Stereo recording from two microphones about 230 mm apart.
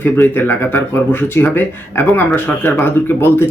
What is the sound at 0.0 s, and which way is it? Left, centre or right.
Speech, centre.